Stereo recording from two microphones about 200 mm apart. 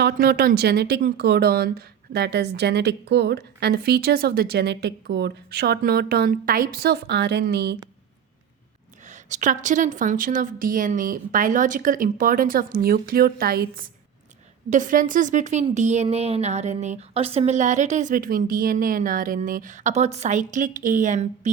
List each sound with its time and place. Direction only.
0.0 s speech: 50° right (ahead or behind)
9.0 s a woman's voice: 40° right (ahead or behind)